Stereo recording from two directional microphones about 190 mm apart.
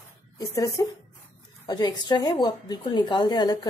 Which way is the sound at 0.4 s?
20° left (ahead or behind).